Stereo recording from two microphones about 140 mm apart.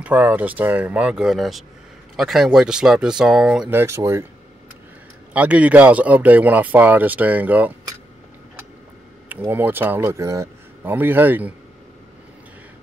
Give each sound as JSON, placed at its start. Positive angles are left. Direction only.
{"t": 0.0, "sound": "speech", "side_deg": -10}
{"t": 3.7, "sound": "speech", "side_deg": -20}
{"t": 5.3, "sound": "speech", "side_deg": -10}
{"t": 9.3, "sound": "speech", "side_deg": -15}